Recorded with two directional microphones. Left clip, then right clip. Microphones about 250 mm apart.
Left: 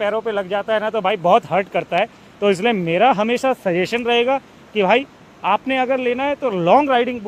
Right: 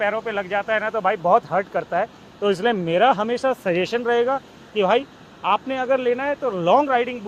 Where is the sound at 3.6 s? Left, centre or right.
Centre.